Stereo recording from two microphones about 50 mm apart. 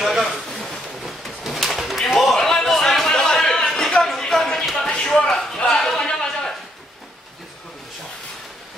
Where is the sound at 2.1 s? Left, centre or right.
Centre.